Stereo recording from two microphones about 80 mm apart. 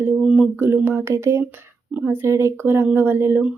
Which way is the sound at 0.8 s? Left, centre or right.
Right.